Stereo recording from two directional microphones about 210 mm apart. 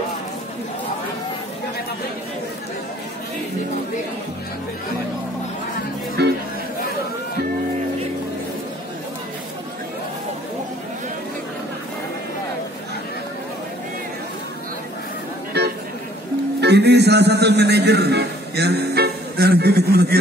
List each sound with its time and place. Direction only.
6.2 s music: 50° right (ahead or behind)
16.6 s a man's voice: 50° right (ahead or behind)